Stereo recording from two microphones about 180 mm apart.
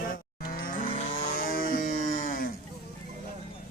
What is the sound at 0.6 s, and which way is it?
Cattle, 45° left (ahead or behind).